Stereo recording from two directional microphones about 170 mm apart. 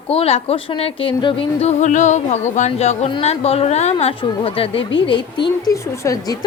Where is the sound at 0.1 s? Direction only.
35° left (ahead or behind).